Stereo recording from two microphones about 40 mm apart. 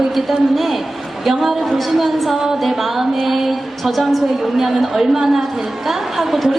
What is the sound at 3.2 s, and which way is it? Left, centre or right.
A woman's voice, centre.